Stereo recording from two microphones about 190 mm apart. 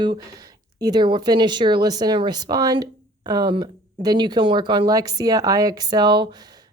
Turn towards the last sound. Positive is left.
turn(degrees=-25)  # may be behind; listen again after turning